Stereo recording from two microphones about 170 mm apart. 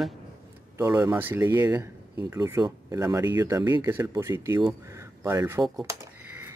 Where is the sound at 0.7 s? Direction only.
20° right (ahead or behind).